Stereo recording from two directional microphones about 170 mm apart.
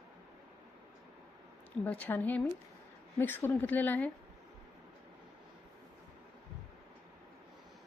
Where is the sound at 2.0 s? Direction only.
10° left (ahead or behind).